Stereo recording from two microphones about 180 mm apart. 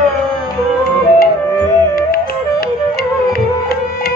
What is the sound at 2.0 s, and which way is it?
Flute, 60° left (ahead or behind).